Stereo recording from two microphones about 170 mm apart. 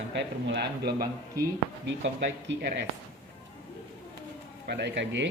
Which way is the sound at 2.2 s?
85° right.